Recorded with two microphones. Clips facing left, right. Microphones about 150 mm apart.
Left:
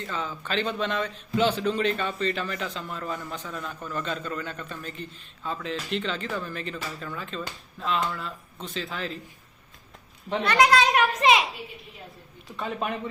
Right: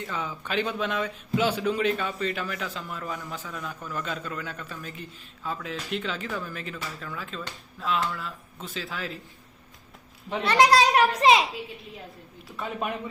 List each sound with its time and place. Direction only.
0.0 s a man's voice: 10° right (ahead or behind)
10.4 s a child's voice: 30° right (ahead or behind)
12.5 s speech: 5° right (ahead or behind)